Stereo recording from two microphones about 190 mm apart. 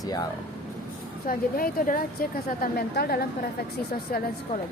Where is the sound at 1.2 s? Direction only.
45° left (ahead or behind).